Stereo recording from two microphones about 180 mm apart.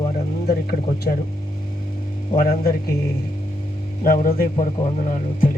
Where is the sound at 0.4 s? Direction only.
60° left (ahead or behind).